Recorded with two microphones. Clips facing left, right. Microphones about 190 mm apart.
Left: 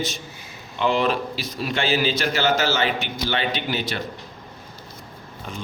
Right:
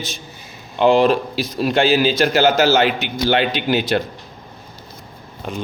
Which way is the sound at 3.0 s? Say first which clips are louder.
Right 7 dB; 85° right.